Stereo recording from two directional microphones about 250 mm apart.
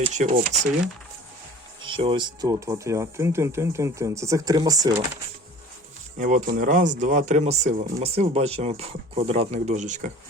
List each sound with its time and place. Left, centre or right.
0.0 s speech: right
1.8 s speech: centre
6.1 s speech: right